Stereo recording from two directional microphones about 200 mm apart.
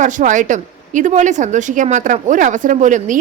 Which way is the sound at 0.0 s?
40° right (ahead or behind).